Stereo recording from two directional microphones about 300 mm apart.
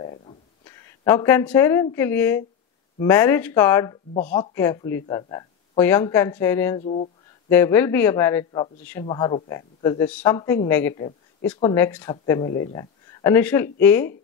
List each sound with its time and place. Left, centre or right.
0.0 s a sound: centre
0.7 s speech: centre
6.8 s speech: left
7.4 s speech: centre